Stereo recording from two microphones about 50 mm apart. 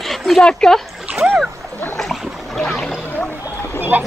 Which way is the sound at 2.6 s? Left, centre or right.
Centre.